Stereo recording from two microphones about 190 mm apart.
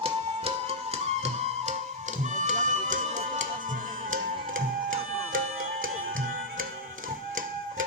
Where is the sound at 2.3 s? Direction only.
40° right (ahead or behind).